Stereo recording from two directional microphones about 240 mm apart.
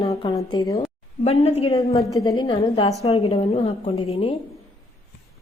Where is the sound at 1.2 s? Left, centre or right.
Left.